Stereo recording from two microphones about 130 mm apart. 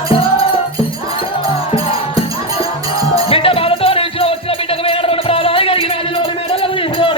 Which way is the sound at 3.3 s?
45° left (ahead or behind).